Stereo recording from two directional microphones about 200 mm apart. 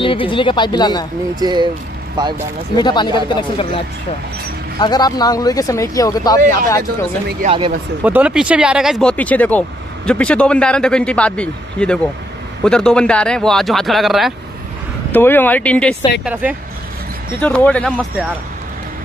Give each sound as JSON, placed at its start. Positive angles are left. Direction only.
{"t": 0.0, "sound": "speech", "side_deg": 25}
{"t": 1.4, "sound": "speech", "side_deg": -20}
{"t": 2.8, "sound": "speech", "side_deg": 20}
{"t": 7.4, "sound": "speech", "side_deg": -25}
{"t": 8.0, "sound": "speech", "side_deg": -5}
{"t": 16.3, "sound": "speech", "side_deg": -5}
{"t": 17.4, "sound": "speech", "side_deg": 5}